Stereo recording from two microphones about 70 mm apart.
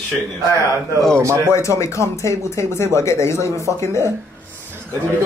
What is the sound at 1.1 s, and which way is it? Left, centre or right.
Speech, right.